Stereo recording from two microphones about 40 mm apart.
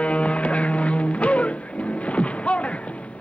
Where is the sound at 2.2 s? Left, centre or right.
Left.